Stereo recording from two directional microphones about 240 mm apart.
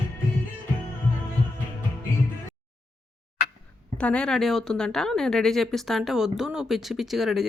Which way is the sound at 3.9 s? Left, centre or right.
Centre.